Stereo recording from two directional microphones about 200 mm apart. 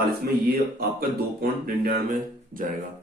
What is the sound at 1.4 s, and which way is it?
Speech, 50° right (ahead or behind).